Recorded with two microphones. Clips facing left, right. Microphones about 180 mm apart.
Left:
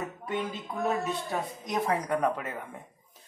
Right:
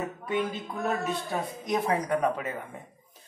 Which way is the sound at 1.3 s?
5° right (ahead or behind).